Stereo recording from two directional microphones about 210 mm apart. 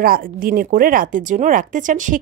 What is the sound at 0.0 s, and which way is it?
Speech, 40° right (ahead or behind).